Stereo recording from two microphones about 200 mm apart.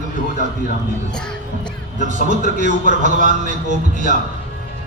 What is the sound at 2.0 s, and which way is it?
A man's voice, 40° right (ahead or behind).